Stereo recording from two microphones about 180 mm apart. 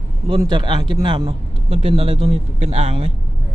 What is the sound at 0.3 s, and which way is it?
A man's voice, 25° right (ahead or behind).